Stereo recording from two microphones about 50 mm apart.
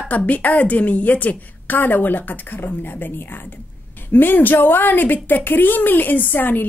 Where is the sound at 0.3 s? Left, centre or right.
Left.